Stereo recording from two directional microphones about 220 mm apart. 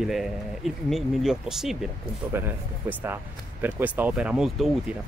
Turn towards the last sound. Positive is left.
turn(degrees=0)  # may be behind; listen again after turning